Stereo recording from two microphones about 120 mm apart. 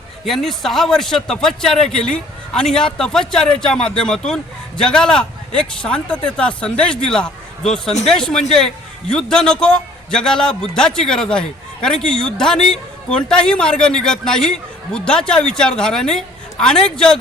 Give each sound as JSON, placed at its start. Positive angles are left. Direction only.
{"t": 0.3, "sound": "a man's voice", "side_deg": 5}